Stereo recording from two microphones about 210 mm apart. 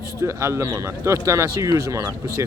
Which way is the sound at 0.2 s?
15° right (ahead or behind).